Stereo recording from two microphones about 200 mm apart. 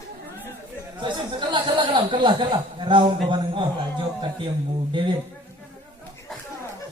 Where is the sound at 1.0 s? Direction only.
25° right (ahead or behind).